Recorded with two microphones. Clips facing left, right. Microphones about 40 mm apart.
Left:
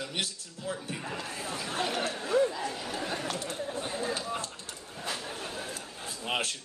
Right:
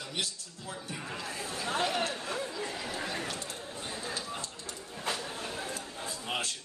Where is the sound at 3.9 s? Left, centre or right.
Left.